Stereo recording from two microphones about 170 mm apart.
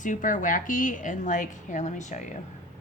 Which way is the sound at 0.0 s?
50° left (ahead or behind).